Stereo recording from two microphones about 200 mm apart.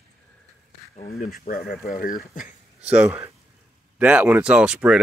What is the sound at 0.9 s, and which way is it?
Speech, 45° left (ahead or behind).